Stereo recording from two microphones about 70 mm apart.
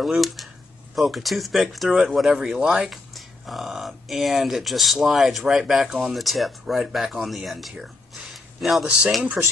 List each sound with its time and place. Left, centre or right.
0.0 s speech: centre
8.2 s a sound: centre
9.4 s speech: centre